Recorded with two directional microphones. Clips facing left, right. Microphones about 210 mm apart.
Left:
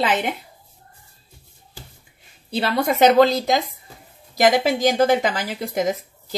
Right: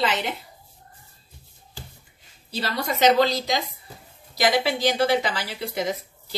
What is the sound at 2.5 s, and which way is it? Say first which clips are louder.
A woman's voice: left 7 dB; 55° left (ahead or behind).